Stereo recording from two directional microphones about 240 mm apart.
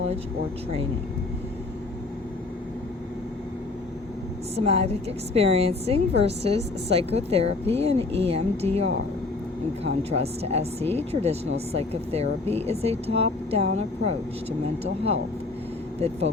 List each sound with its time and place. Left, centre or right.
4.5 s a woman's voice: right
16.0 s a woman's voice: right